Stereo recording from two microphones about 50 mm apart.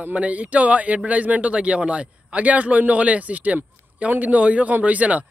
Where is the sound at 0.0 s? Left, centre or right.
Right.